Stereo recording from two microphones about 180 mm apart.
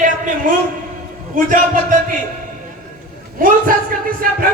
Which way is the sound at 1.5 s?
50° right (ahead or behind).